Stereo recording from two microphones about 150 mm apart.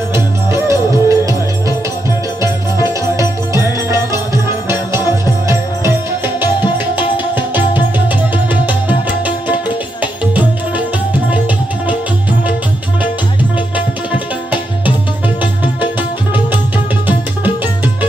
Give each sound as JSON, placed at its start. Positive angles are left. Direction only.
{"t": 0.1, "sound": "music", "side_deg": -20}
{"t": 2.4, "sound": "music", "side_deg": -20}
{"t": 11.2, "sound": "music", "side_deg": -10}
{"t": 13.7, "sound": "tabla", "side_deg": -10}
{"t": 15.2, "sound": "music", "side_deg": -10}